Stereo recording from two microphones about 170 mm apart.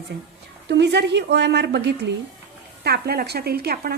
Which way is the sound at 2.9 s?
70° right (ahead or behind).